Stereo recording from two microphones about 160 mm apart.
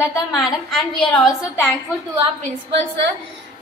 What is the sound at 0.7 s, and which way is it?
Speech, centre (ahead or behind).